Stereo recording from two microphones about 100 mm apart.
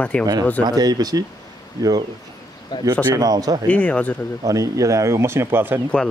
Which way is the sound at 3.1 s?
40° right (ahead or behind).